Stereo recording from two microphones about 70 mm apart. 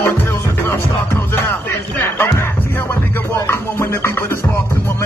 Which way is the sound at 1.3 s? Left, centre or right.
Left.